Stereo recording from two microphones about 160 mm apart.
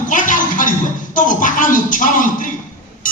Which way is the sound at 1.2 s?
55° left (ahead or behind).